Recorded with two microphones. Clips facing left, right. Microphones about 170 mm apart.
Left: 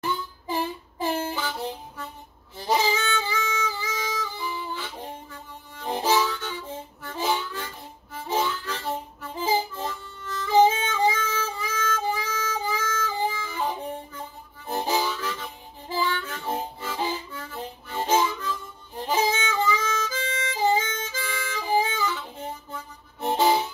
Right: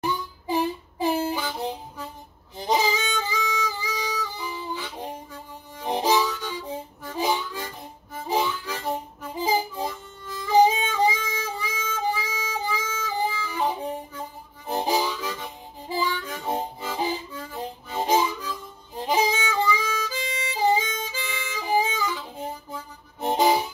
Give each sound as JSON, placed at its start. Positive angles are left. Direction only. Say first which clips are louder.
{"t": 0.0, "sound": "harmonica", "louder": "right 2 dB", "side_deg": -15}
{"t": 2.5, "sound": "music", "louder": "right 1 dB", "side_deg": -15}
{"t": 5.8, "sound": "harmonica", "louder": "right 1 dB", "side_deg": -15}
{"t": 14.7, "sound": "harmonica", "louder": "right 1 dB", "side_deg": -15}
{"t": 19.0, "sound": "music", "louder": "right 1 dB", "side_deg": -15}
{"t": 23.2, "sound": "harmonica", "louder": "right 1 dB", "side_deg": -15}